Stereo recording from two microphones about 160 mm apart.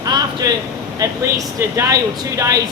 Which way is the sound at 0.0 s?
25° right (ahead or behind).